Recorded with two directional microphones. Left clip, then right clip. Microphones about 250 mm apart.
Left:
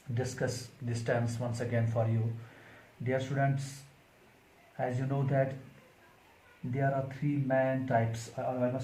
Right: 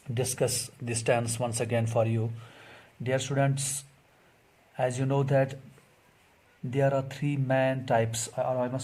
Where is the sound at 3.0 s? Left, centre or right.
Right.